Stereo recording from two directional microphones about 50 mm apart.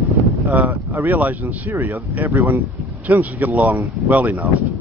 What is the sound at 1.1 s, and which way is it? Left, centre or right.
Speech, right.